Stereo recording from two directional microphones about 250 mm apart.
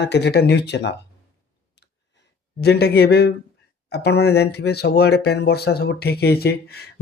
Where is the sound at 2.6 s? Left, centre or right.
Left.